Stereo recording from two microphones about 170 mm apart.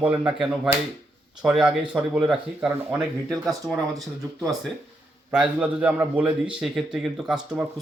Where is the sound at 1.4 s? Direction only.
5° right (ahead or behind).